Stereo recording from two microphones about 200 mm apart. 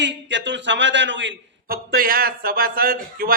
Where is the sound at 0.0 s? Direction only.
65° right (ahead or behind).